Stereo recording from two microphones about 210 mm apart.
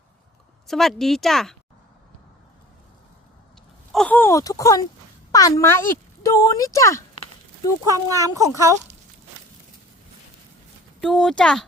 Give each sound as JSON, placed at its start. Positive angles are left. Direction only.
{"t": 0.7, "sound": "speech", "side_deg": 0}
{"t": 3.9, "sound": "speech", "side_deg": 5}
{"t": 7.9, "sound": "speech", "side_deg": -15}
{"t": 11.0, "sound": "speech", "side_deg": 0}